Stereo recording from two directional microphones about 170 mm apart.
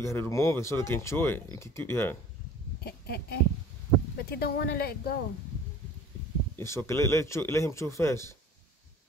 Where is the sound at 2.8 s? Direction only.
65° left (ahead or behind).